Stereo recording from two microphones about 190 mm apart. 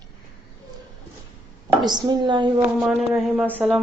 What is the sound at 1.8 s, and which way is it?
Speech, 20° right (ahead or behind).